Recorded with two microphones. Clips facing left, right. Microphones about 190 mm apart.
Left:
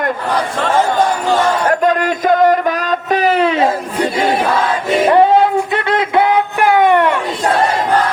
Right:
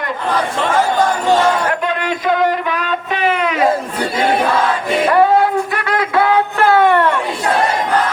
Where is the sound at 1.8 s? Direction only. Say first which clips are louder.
Left 5 dB; 45° left (ahead or behind).